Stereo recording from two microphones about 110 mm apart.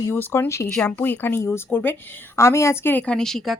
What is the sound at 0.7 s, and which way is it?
A woman's voice, 10° left (ahead or behind).